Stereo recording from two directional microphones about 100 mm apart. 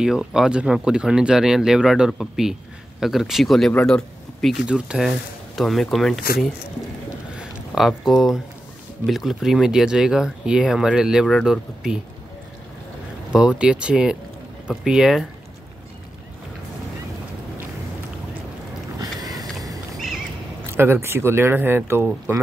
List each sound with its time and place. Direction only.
0.0 s speech: 5° right (ahead or behind)
4.6 s speech: 10° right (ahead or behind)
7.3 s a sound: 5° right (ahead or behind)
9.0 s speech: centre (ahead or behind)
11.2 s speech: 5° left (ahead or behind)
13.3 s speech: 10° right (ahead or behind)
18.9 s boat: 40° right (ahead or behind)
19.5 s a sound: 35° right (ahead or behind)
20.7 s speech: 25° right (ahead or behind)